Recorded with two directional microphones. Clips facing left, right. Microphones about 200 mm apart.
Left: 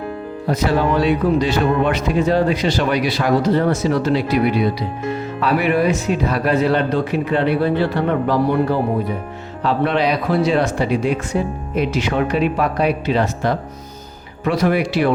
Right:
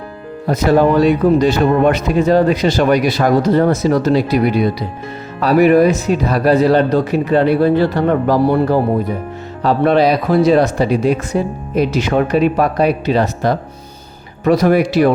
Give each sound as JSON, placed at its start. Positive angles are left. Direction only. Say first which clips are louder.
{"t": 0.4, "sound": "speech", "louder": "right 6 dB", "side_deg": -45}